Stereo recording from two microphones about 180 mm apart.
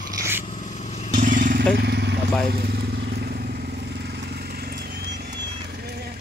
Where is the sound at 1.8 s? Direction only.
65° right (ahead or behind).